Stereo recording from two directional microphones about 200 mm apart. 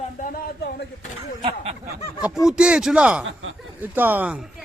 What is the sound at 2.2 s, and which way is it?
Speech, centre (ahead or behind).